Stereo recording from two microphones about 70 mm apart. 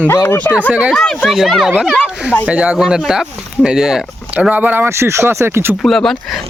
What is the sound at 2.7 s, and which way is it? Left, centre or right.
Speech, centre.